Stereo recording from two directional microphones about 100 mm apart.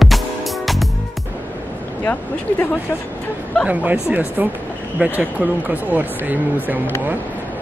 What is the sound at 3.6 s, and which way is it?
Speech, 10° right (ahead or behind).